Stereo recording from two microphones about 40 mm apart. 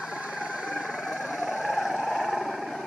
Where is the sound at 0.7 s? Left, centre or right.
Centre.